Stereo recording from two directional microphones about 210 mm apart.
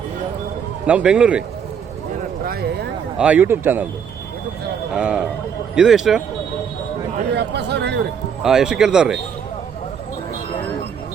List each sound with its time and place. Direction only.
0.9 s speech: 5° right (ahead or behind)
2.4 s a sound: 45° right (ahead or behind)
3.2 s speech: 5° right (ahead or behind)
4.9 s speech: 5° right (ahead or behind)
7.3 s speech: 55° right (ahead or behind)
8.4 s speech: centre (ahead or behind)